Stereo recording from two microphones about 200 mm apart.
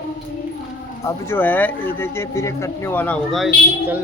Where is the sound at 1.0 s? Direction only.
10° left (ahead or behind).